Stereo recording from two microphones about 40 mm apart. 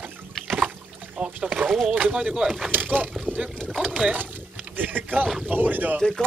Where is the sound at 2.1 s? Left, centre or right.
Right.